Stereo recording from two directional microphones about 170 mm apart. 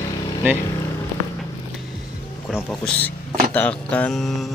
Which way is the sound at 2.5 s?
5° left (ahead or behind).